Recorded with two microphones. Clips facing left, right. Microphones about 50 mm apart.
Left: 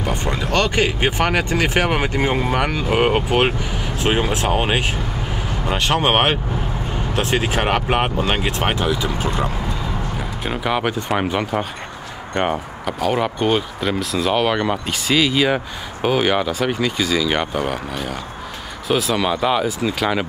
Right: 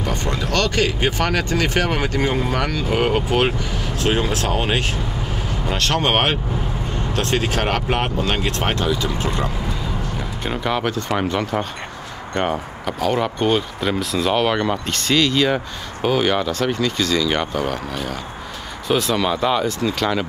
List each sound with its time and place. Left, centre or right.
0.0 s speech: centre